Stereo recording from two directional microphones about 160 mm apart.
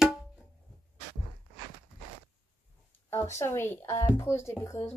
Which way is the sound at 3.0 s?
15° left (ahead or behind).